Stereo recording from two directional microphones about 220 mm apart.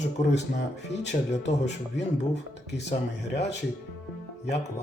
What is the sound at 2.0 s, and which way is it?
Speech, 55° left (ahead or behind).